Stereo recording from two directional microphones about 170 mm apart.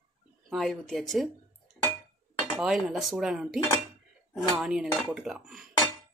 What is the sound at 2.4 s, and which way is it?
Speech, 5° right (ahead or behind).